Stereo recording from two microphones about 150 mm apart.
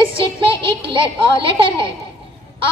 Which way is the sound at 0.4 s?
35° right (ahead or behind).